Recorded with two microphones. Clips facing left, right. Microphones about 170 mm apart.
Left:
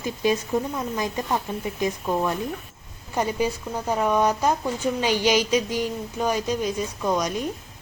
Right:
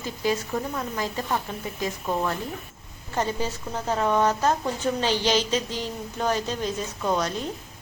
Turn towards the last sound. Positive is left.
turn(degrees=15)  # may be behind; listen again after turning